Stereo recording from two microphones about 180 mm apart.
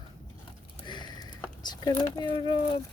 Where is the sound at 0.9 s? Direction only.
25° left (ahead or behind).